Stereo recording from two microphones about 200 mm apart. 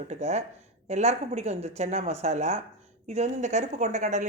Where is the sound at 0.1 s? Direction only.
35° right (ahead or behind).